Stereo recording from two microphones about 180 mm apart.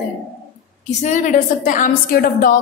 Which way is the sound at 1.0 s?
45° left (ahead or behind).